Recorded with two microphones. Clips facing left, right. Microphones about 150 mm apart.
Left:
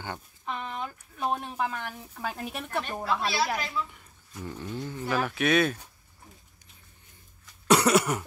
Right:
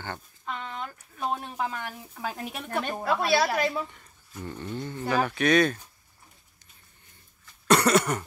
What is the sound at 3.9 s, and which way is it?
Speech, 5° left (ahead or behind).